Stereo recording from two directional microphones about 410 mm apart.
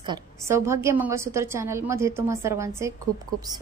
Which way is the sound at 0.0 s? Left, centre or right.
Centre.